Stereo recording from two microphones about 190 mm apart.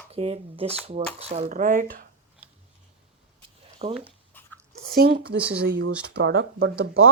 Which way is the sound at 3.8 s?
35° right (ahead or behind).